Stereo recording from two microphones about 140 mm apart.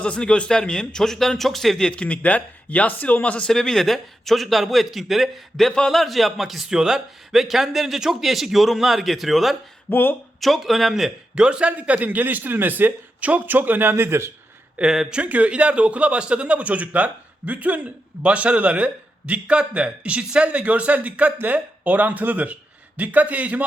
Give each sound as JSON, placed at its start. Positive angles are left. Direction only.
{"t": 0.0, "sound": "speech", "side_deg": 5}
{"t": 9.9, "sound": "speech", "side_deg": 15}
{"t": 10.4, "sound": "a man's voice", "side_deg": 0}
{"t": 14.8, "sound": "a man's voice", "side_deg": -5}